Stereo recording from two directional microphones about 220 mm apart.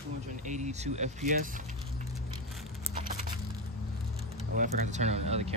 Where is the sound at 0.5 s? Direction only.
30° right (ahead or behind).